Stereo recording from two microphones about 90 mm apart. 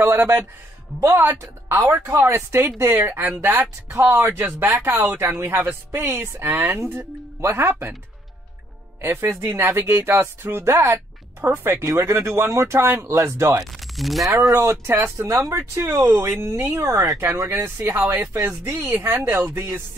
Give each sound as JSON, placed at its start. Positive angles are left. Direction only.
{"t": 0.0, "sound": "speech", "side_deg": -25}
{"t": 9.0, "sound": "speech", "side_deg": -25}
{"t": 13.6, "sound": "speech", "side_deg": 0}
{"t": 14.2, "sound": "speech", "side_deg": -40}
{"t": 17.2, "sound": "speech", "side_deg": -30}